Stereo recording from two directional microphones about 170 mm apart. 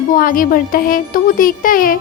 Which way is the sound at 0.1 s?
55° left (ahead or behind).